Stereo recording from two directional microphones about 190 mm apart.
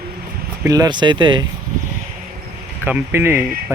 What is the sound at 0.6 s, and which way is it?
Speech, 20° right (ahead or behind).